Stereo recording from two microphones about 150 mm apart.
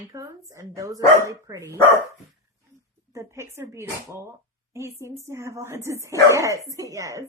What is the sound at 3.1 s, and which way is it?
Speech, 20° right (ahead or behind).